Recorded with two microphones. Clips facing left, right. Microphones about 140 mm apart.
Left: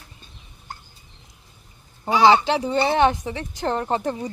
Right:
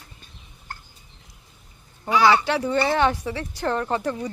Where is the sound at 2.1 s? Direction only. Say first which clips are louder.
Left 2 dB; 25° left (ahead or behind).